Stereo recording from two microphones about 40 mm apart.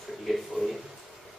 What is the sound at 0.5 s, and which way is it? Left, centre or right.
Speech, centre.